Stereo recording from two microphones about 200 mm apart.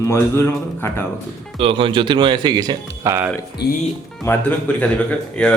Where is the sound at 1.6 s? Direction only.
25° right (ahead or behind).